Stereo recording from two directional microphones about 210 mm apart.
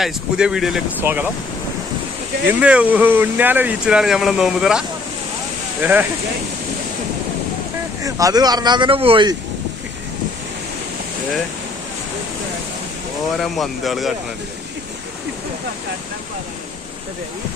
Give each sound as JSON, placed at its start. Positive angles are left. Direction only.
{"t": 0.0, "sound": "speech", "side_deg": -5}
{"t": 2.5, "sound": "speech", "side_deg": -5}
{"t": 8.0, "sound": "speech", "side_deg": -15}
{"t": 13.3, "sound": "speech", "side_deg": 0}